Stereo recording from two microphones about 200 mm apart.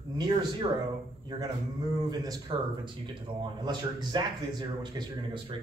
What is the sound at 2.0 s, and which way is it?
Speech, 20° right (ahead or behind).